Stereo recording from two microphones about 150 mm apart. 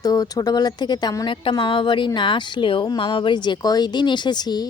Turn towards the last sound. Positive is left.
turn(degrees=25)  # may be behind; listen again after turning